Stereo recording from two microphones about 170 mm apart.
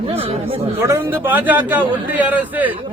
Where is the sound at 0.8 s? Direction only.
15° right (ahead or behind).